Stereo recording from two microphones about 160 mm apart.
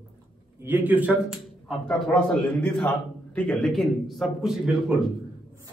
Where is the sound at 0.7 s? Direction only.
10° right (ahead or behind).